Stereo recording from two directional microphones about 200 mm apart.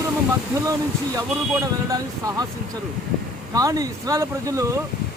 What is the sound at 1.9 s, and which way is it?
Speech, 20° right (ahead or behind).